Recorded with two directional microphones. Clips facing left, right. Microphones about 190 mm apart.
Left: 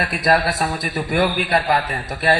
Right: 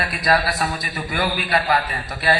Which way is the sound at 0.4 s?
50° left (ahead or behind).